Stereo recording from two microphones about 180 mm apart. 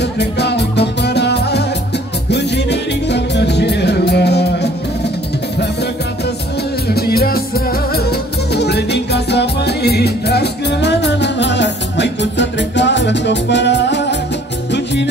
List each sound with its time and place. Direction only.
0.0 s music: 70° left (ahead or behind)
6.9 s music: 60° left (ahead or behind)